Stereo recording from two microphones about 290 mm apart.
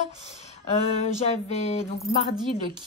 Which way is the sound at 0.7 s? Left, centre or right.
Left.